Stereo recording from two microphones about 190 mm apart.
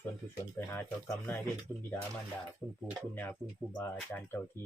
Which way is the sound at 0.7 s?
10° left (ahead or behind).